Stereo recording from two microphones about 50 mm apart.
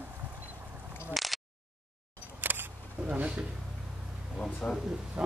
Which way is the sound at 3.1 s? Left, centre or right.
Right.